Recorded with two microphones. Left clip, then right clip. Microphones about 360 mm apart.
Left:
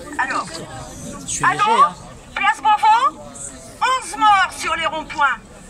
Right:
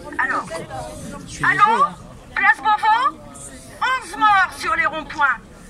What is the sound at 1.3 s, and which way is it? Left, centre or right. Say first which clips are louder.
Speech: right 2 dB; centre.